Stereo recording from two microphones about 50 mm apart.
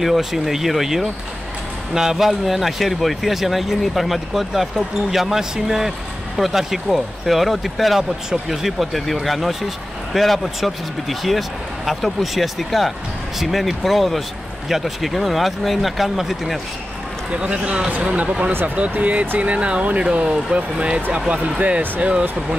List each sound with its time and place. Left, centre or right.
0.0 s speech: centre
17.3 s speech: right